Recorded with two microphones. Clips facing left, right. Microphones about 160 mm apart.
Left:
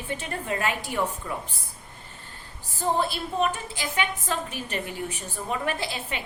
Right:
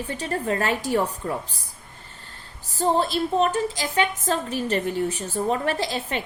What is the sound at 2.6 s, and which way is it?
A woman's voice, 40° right (ahead or behind).